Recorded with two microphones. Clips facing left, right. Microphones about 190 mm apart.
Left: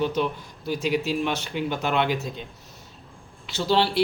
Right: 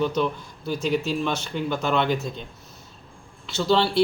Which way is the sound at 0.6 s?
10° left (ahead or behind).